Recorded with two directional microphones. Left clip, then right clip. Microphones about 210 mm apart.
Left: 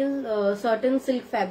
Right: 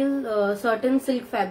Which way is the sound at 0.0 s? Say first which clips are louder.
Right 1 dB; 10° right (ahead or behind).